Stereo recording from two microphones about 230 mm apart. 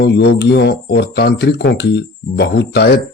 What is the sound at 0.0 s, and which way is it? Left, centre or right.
Speech, left.